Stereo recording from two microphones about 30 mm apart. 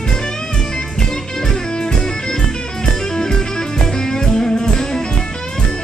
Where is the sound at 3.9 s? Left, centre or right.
Left.